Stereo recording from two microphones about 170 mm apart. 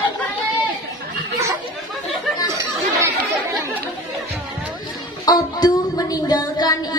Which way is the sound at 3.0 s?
20° right (ahead or behind).